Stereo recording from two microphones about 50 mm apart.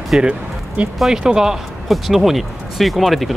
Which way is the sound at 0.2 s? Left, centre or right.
Right.